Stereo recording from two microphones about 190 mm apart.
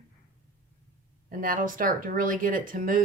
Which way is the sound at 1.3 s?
45° right (ahead or behind).